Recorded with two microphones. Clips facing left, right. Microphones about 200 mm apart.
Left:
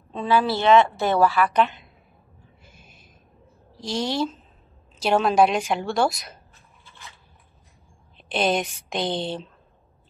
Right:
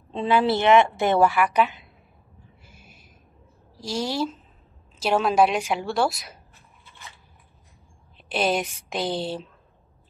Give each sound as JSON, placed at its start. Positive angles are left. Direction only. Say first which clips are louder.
{"t": 0.2, "sound": "a woman's voice", "louder": "right 1 dB", "side_deg": -20}
{"t": 1.6, "sound": "a woman's voice", "louder": "left 1 dB", "side_deg": 0}
{"t": 3.8, "sound": "a woman's voice", "louder": "left 1 dB", "side_deg": -5}
{"t": 8.3, "sound": "a woman's voice", "louder": "left 1 dB", "side_deg": -5}